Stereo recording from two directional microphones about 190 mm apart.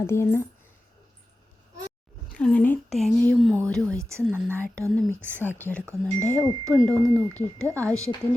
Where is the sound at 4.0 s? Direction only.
15° right (ahead or behind).